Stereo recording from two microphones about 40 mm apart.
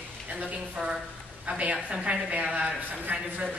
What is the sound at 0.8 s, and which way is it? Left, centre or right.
Speech, centre.